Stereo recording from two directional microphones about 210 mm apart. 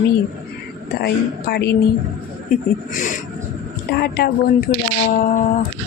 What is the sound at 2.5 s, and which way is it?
Speech, 40° left (ahead or behind).